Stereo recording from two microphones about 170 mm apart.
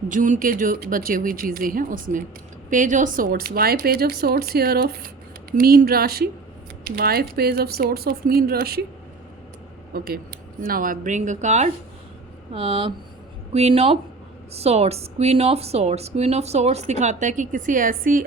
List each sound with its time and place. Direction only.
0.1 s speech: 50° right (ahead or behind)
9.9 s speech: 60° right (ahead or behind)